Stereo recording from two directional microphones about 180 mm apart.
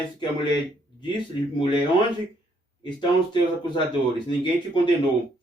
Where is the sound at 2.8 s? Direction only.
25° left (ahead or behind).